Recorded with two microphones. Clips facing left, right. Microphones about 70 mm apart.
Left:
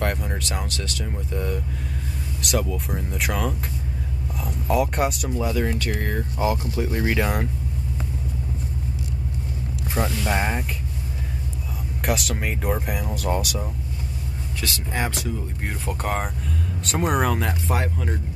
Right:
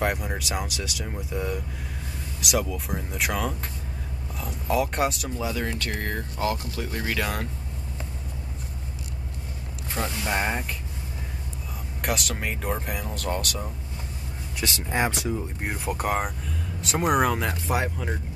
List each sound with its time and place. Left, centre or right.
0.0 s speech: centre
6.3 s speech: centre
9.9 s speech: centre
10.3 s speech: centre
12.0 s speech: centre
14.6 s speech: right; by 18.1 s centre